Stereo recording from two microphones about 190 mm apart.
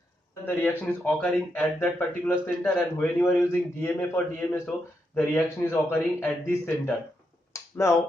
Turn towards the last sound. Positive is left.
turn(degrees=15)  # may be behind; listen again after turning